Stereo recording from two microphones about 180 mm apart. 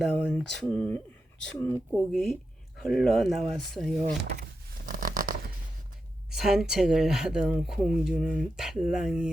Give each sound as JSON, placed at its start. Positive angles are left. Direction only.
{"t": 0.0, "sound": "speech", "side_deg": 5}
{"t": 4.9, "sound": "a sound", "side_deg": -50}
{"t": 6.3, "sound": "speech", "side_deg": 0}